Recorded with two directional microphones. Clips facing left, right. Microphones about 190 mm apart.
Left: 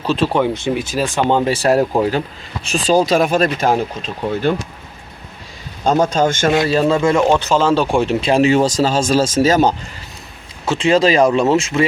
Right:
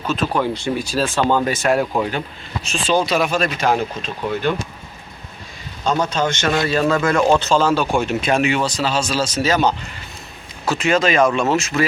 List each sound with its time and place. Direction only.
0.0 s speech: 30° left (ahead or behind); by 1.4 s 15° left (ahead or behind)
1.4 s speech: 30° left (ahead or behind)
5.8 s speech: 50° left (ahead or behind)
6.7 s speech: 30° left (ahead or behind)
7.3 s speech: 15° left (ahead or behind)
7.6 s speech: 30° left (ahead or behind); by 9.7 s 45° left (ahead or behind)
10.7 s speech: 30° left (ahead or behind)